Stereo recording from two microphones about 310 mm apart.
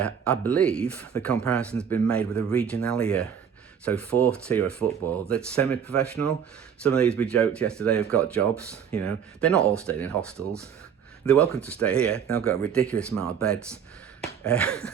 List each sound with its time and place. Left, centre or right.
0.0 s speech: centre
4.3 s speech: centre
10.3 s speech: centre
11.3 s speech: centre